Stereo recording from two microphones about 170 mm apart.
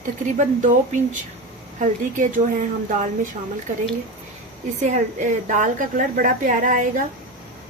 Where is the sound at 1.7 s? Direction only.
50° right (ahead or behind).